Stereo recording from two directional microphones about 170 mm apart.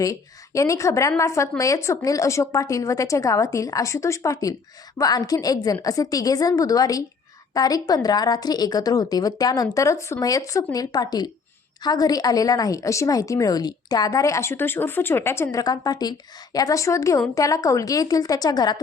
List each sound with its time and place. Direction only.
0.0 s a woman's voice: 20° left (ahead or behind)